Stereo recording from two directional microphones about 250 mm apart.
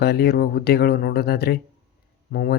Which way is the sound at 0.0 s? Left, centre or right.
Left.